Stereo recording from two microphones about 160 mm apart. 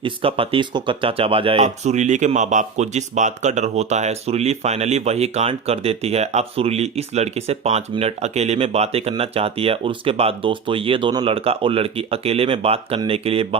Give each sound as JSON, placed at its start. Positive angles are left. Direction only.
{"t": 0.0, "sound": "speech", "side_deg": -35}